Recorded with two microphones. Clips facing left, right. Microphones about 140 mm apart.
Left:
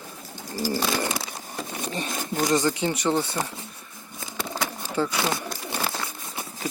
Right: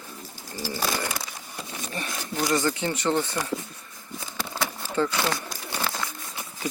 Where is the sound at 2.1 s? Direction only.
50° left (ahead or behind).